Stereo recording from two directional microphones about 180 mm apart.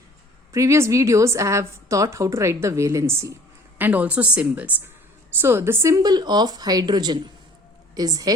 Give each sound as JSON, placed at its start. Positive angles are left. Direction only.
{"t": 0.5, "sound": "a woman's voice", "side_deg": -15}